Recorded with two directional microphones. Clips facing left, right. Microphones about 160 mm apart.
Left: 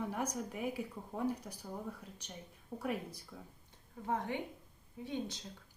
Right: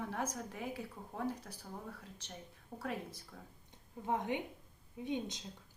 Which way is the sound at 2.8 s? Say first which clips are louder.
Left 3 dB; 15° left (ahead or behind).